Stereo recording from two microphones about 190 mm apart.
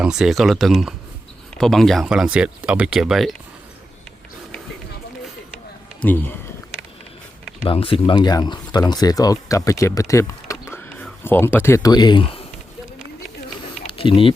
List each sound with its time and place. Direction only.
0.0 s speech: 5° right (ahead or behind)
6.0 s speech: 10° left (ahead or behind)
7.6 s speech: 30° left (ahead or behind)
13.8 s a sound: 30° left (ahead or behind)